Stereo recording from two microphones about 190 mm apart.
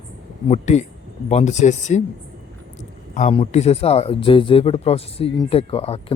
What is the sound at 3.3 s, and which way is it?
Speech, 30° left (ahead or behind).